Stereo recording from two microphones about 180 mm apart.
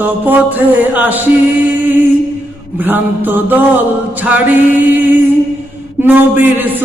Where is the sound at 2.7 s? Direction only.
10° right (ahead or behind).